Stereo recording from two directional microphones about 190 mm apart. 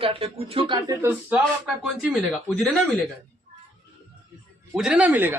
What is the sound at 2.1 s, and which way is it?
Speech, 5° left (ahead or behind).